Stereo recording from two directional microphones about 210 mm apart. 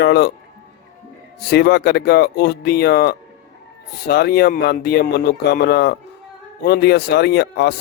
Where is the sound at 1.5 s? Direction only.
50° left (ahead or behind).